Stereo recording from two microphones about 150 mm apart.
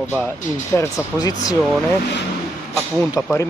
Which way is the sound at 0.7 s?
25° left (ahead or behind).